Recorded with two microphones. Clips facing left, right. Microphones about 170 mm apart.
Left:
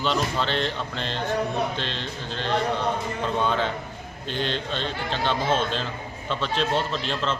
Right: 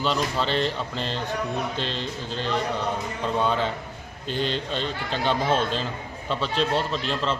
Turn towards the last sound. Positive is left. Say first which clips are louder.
# right 1 dB
turn(degrees=0)  # may be behind; listen again after turning